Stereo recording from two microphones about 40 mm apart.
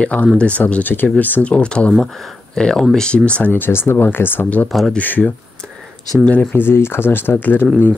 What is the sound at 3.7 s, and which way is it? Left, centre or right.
Speech, left.